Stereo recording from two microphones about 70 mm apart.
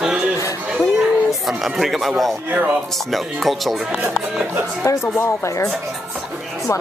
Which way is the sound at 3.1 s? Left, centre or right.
Centre.